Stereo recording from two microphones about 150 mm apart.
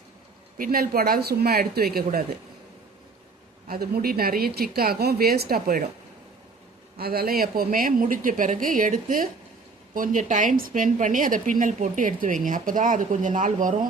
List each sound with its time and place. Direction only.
0.6 s speech: 75° right (ahead or behind)
3.7 s speech: 85° right
7.0 s a woman's voice: 90° right; by 13.7 s 60° right (ahead or behind)